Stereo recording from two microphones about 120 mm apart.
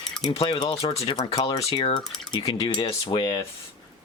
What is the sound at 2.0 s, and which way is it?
Speech, 5° left (ahead or behind).